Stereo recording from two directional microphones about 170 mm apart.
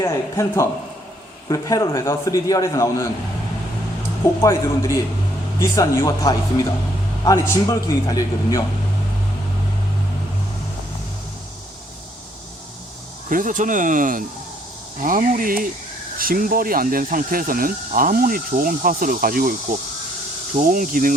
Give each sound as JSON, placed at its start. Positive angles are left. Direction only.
{"t": 0.0, "sound": "a man's voice", "side_deg": 15}
{"t": 4.4, "sound": "a man's voice", "side_deg": 15}
{"t": 13.3, "sound": "speech", "side_deg": -50}
{"t": 20.6, "sound": "speech", "side_deg": -55}